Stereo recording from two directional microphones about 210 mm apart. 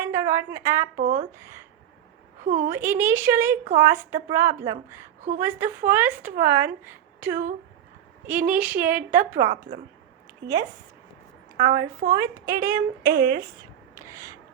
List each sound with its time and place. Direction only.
0.0 s a woman's voice: 10° right (ahead or behind)
0.9 s speech: 40° right (ahead or behind)
1.4 s speech: 10° right (ahead or behind)
2.4 s a woman's voice: 35° right (ahead or behind)
2.6 s a woman's voice: 10° right (ahead or behind)
11.6 s a woman's voice: 20° right (ahead or behind)
12.6 s speech: 45° right (ahead or behind)
13.9 s rub: 15° right (ahead or behind)